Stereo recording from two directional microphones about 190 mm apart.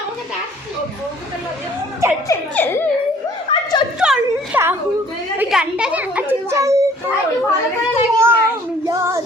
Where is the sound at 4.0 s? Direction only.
5° right (ahead or behind).